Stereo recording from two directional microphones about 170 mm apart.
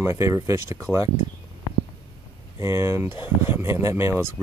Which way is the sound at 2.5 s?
15° right (ahead or behind).